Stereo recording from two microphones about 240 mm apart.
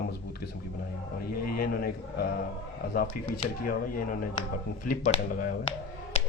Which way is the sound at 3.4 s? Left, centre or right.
Left.